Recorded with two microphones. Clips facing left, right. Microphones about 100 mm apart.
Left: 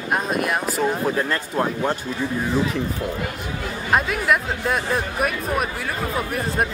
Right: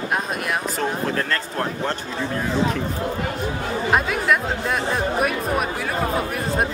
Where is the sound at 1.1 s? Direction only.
15° left (ahead or behind).